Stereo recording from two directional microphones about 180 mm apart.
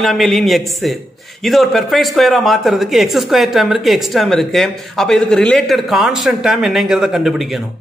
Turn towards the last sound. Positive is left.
turn(degrees=0)  # may be behind; listen again after turning